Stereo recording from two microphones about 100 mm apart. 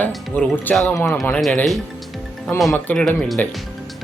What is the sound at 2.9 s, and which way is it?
Speech, 5° left (ahead or behind).